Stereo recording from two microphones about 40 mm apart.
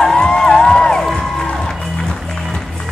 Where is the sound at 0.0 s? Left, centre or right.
Centre.